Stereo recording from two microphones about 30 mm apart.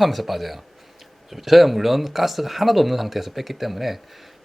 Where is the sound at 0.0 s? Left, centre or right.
Centre.